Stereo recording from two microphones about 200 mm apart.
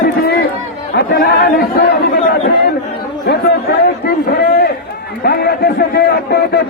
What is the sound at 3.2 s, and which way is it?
A man's voice, 55° left (ahead or behind).